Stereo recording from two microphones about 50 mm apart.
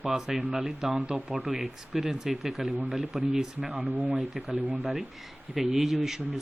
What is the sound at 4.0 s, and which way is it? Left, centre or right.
Speech, right.